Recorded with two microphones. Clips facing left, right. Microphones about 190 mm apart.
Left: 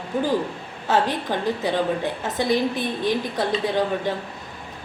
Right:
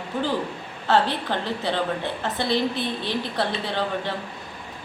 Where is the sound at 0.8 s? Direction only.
15° left (ahead or behind).